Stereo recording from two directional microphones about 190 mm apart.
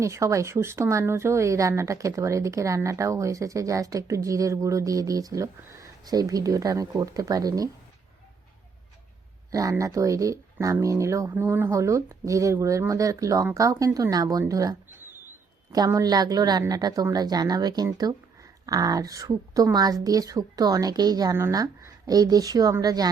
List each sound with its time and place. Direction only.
0.0 s speech: 15° right (ahead or behind)
9.5 s a woman's voice: 20° right (ahead or behind)